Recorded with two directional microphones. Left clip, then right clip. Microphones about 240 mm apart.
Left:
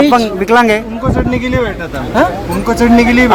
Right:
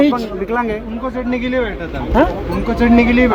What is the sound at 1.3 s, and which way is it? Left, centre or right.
Speech, left.